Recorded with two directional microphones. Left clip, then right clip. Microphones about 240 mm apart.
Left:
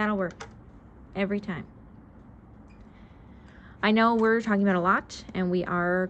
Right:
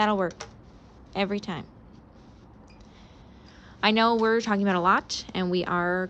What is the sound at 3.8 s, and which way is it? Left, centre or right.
Speech, centre.